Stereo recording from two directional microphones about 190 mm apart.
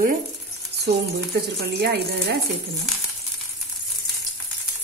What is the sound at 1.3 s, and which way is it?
Speech, 55° right (ahead or behind).